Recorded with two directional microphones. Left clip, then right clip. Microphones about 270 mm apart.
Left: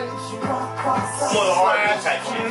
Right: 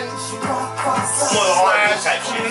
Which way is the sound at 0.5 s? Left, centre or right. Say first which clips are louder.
Right 2 dB; centre.